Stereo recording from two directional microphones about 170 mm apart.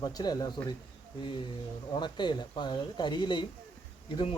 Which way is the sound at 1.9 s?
25° left (ahead or behind).